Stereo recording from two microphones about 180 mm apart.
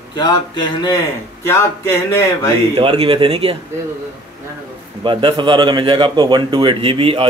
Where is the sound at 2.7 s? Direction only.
30° right (ahead or behind).